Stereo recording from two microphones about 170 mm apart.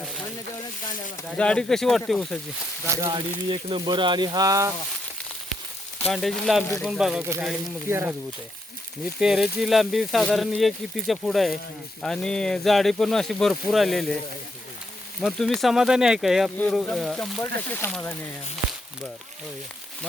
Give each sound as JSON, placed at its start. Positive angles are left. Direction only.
{"t": 1.4, "sound": "speech", "side_deg": 5}
{"t": 2.8, "sound": "speech", "side_deg": -15}
{"t": 3.1, "sound": "speech", "side_deg": -30}
{"t": 6.1, "sound": "speech", "side_deg": 0}
{"t": 9.2, "sound": "speech", "side_deg": -5}
{"t": 15.2, "sound": "speech", "side_deg": 0}